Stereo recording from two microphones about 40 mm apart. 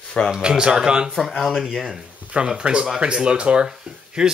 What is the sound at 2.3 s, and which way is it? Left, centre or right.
Speech, right.